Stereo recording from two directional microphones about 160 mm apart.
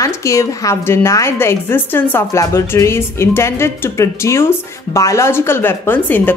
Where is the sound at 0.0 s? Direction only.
20° left (ahead or behind).